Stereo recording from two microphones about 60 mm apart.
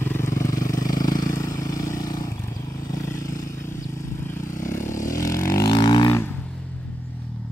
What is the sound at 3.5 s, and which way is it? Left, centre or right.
Vehicle, left.